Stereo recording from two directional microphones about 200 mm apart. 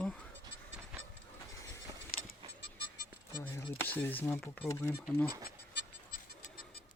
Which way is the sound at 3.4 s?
15° left (ahead or behind).